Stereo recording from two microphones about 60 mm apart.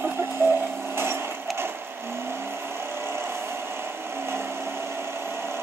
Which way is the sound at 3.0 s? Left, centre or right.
Right.